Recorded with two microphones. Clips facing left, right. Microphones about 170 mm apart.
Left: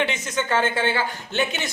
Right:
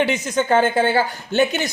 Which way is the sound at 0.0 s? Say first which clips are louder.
Right 5 dB; 35° right (ahead or behind).